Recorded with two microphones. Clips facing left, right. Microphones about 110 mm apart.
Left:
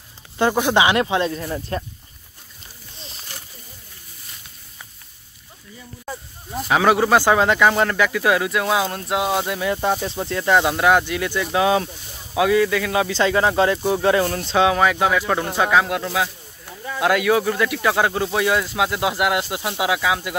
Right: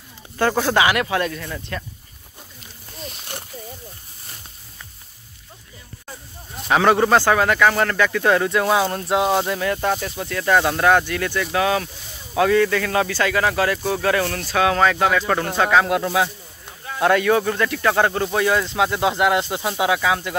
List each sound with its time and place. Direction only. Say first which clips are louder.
0.4 s speech: left 1 dB; 15° left (ahead or behind)
3.3 s a sound: right 5 dB; 55° right (ahead or behind)
6.7 s speech: right 1 dB; 5° left (ahead or behind)
9.7 s speech: left 1 dB; 15° left (ahead or behind)
12.4 s speech: even; 10° left (ahead or behind)
13.2 s speech: left 5 dB; 25° left (ahead or behind)
14.7 s speech: even; 10° left (ahead or behind)